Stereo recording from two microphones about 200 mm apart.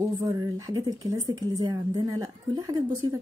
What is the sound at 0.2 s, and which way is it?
Speech, 20° right (ahead or behind).